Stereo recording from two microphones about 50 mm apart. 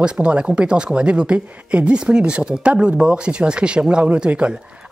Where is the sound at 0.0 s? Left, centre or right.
Centre.